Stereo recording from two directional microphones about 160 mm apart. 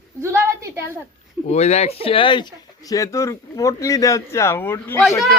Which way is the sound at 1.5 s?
45° left (ahead or behind).